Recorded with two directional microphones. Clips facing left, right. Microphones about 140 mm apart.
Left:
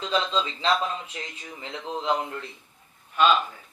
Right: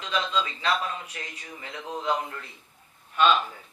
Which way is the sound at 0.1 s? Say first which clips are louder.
Left 1 dB; 25° left (ahead or behind).